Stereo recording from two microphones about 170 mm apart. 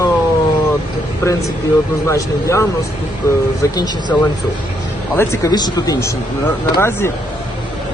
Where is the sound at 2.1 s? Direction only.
15° left (ahead or behind).